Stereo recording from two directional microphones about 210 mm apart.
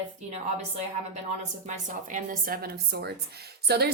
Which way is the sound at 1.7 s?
40° right (ahead or behind).